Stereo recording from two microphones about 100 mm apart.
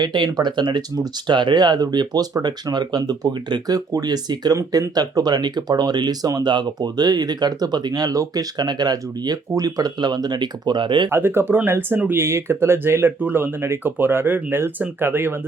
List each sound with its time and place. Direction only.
0.0 s speech: 45° right (ahead or behind)
11.1 s speech: 25° right (ahead or behind)